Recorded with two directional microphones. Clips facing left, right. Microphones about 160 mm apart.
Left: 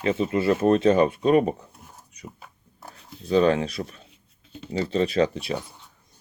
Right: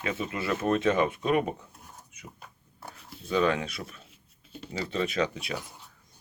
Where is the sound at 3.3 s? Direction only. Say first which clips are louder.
Left 6 dB; 35° left (ahead or behind).